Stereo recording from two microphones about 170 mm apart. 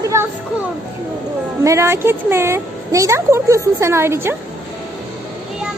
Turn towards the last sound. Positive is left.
turn(degrees=-15)  # may be behind; listen again after turning